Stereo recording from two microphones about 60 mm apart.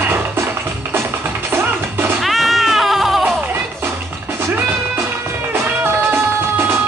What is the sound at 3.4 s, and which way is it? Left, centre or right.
Music, right.